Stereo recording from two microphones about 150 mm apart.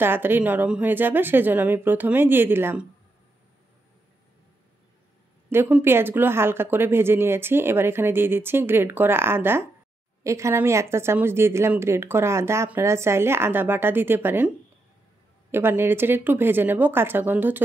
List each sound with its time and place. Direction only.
0.0 s a woman's voice: 15° right (ahead or behind)
5.5 s a woman's voice: 15° right (ahead or behind)
15.5 s a woman's voice: 15° right (ahead or behind)